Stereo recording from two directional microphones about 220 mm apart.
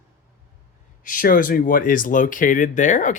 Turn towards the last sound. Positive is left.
turn(degrees=35)  # may be behind; listen again after turning